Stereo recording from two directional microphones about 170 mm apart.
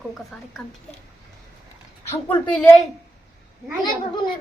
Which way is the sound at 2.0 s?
10° left (ahead or behind).